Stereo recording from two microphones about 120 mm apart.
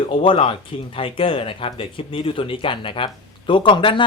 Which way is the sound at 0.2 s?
45° left (ahead or behind).